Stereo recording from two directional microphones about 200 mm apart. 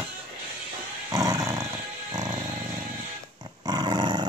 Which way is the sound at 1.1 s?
15° right (ahead or behind).